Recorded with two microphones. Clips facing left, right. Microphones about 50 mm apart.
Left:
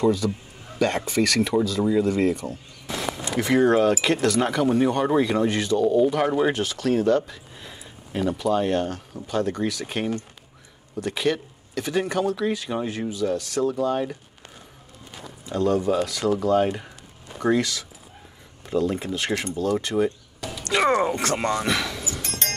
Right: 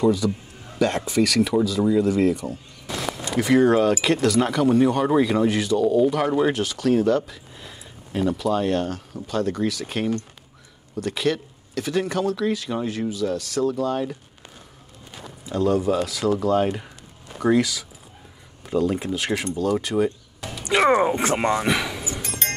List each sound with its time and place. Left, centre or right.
0.0 s speech: centre
15.4 s speech: centre
20.4 s speech: centre